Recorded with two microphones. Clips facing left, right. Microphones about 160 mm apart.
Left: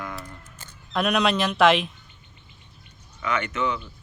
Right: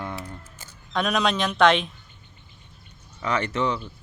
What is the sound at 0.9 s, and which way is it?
Speech, centre (ahead or behind).